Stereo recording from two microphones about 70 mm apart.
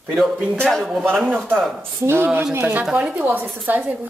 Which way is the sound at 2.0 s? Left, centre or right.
Right.